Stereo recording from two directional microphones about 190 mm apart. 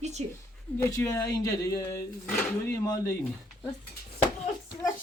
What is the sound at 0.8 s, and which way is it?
Speech, 15° left (ahead or behind).